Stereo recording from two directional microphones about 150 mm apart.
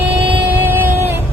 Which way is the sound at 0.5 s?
15° right (ahead or behind).